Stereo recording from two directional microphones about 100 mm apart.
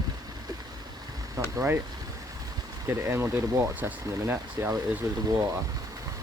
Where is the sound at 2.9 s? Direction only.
25° right (ahead or behind).